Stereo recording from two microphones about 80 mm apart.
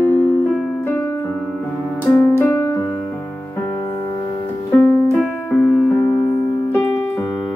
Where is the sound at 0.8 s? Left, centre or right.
Left.